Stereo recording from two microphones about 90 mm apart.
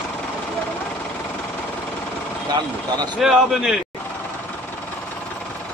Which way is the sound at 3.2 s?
5° right (ahead or behind).